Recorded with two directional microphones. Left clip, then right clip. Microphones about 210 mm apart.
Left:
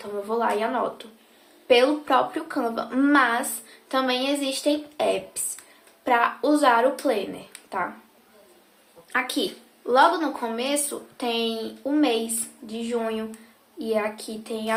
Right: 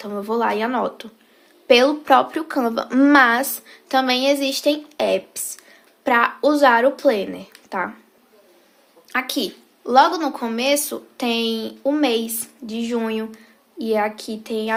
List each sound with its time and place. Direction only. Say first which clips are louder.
0.0 s a woman's voice: right 4 dB; 50° right (ahead or behind)
9.1 s a woman's voice: right 2 dB; 40° right (ahead or behind)